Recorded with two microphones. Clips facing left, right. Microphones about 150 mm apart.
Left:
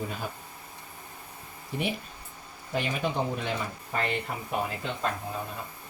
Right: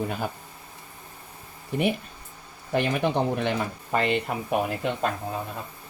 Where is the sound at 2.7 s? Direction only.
70° right (ahead or behind).